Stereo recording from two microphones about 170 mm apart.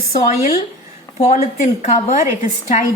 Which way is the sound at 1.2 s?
40° left (ahead or behind).